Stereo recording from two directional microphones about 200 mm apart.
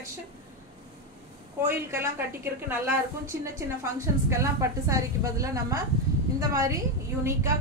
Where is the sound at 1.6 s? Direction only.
10° right (ahead or behind).